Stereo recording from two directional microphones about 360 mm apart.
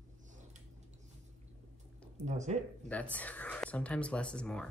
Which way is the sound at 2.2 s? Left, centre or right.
Centre.